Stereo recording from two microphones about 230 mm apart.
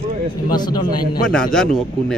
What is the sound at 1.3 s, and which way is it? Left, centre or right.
Speech, centre.